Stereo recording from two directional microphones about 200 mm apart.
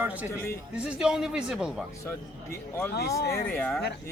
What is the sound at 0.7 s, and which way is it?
Speech, 5° right (ahead or behind).